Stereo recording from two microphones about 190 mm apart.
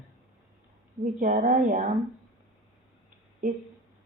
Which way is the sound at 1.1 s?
45° right (ahead or behind).